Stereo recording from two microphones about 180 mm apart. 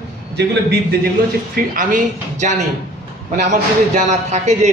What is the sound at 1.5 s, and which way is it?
A man's voice, 50° right (ahead or behind).